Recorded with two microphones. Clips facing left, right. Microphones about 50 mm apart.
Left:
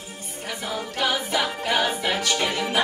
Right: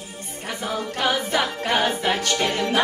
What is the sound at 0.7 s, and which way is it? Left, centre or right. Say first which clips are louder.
Music: right 2 dB; right.